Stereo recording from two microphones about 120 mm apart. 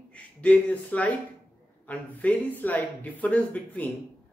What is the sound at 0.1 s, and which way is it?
Speech, 10° left (ahead or behind).